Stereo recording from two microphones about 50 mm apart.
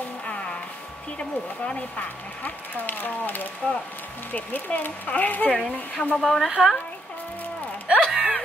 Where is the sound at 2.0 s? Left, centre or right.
Left.